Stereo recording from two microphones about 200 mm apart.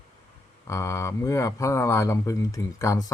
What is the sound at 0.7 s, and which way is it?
Speech, 15° left (ahead or behind).